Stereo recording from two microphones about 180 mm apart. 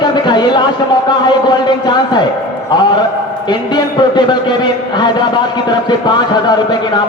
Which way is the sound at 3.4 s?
25° left (ahead or behind).